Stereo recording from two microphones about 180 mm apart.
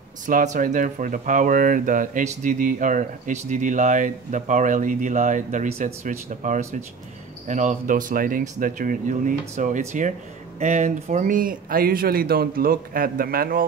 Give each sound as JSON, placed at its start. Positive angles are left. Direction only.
{"t": 0.3, "sound": "speech", "side_deg": -45}